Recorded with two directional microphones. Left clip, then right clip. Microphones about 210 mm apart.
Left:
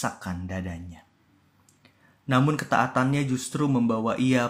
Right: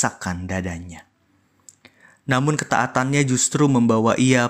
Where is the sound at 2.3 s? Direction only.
40° right (ahead or behind).